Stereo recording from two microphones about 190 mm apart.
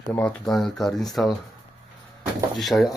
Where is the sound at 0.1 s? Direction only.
5° left (ahead or behind).